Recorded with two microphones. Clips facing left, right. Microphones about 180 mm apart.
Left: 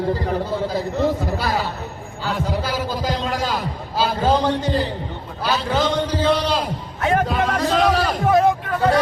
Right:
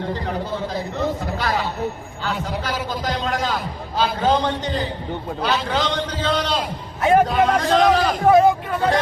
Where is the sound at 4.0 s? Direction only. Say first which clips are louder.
Left 1 dB; 5° left (ahead or behind).